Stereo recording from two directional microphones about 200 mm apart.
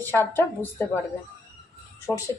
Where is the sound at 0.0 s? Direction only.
10° left (ahead or behind).